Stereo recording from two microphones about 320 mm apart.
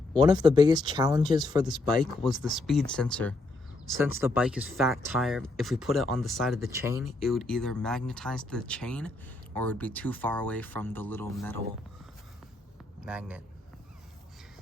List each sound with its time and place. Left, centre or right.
0.2 s speech: centre
2.4 s speech: centre
13.0 s a man's voice: centre